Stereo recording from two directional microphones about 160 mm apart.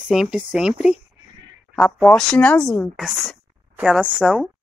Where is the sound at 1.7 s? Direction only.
5° left (ahead or behind).